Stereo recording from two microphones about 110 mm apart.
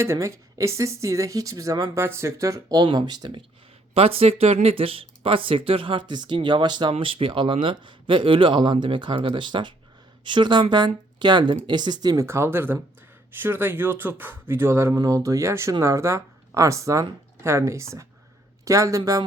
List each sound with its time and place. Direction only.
0.0 s speech: 25° right (ahead or behind); by 3.4 s 45° right (ahead or behind)
3.9 s speech: 60° right (ahead or behind); by 6.9 s 45° right (ahead or behind)
6.9 s speech: 55° right (ahead or behind)
12.1 s speech: 25° right (ahead or behind)